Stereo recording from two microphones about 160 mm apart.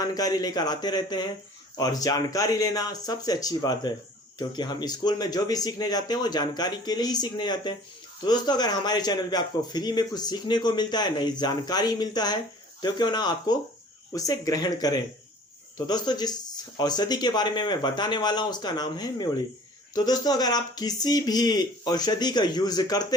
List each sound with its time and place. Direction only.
0.0 s a man's voice: 25° left (ahead or behind)